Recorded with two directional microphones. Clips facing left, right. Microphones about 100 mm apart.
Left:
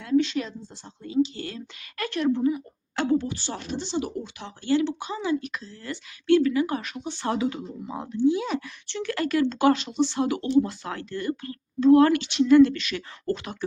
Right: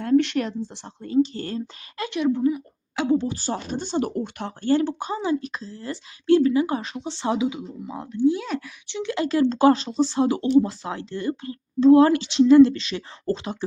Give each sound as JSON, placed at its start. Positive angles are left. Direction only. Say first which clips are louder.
{"t": 0.0, "sound": "speech", "louder": "right 3 dB", "side_deg": -55}
{"t": 2.0, "sound": "a woman's voice", "louder": "right 2 dB", "side_deg": -15}
{"t": 2.4, "sound": "speech", "louder": "right 2 dB", "side_deg": -5}
{"t": 3.2, "sound": "speech", "louder": "right 4 dB", "side_deg": -35}
{"t": 7.9, "sound": "speech", "louder": "right 2 dB", "side_deg": 0}
{"t": 8.9, "sound": "speech", "louder": "right 2 dB", "side_deg": -20}